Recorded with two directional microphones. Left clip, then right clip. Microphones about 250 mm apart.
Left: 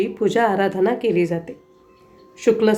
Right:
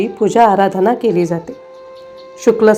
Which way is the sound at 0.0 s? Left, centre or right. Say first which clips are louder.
Right 8 dB; centre.